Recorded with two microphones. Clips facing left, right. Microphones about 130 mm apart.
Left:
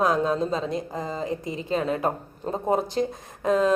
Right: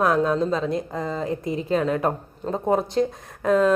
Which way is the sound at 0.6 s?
Centre (ahead or behind).